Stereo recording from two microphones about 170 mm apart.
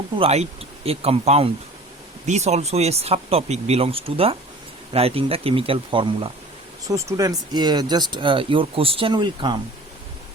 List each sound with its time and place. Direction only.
0.2 s speech: 40° right (ahead or behind)
6.8 s speech: 20° right (ahead or behind)